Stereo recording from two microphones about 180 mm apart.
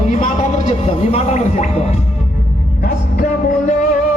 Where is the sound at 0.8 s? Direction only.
35° left (ahead or behind).